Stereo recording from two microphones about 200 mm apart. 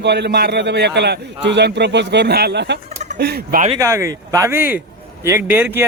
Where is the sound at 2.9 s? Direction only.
35° right (ahead or behind).